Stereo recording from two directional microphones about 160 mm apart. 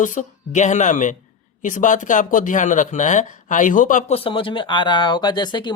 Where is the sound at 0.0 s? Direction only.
55° left (ahead or behind).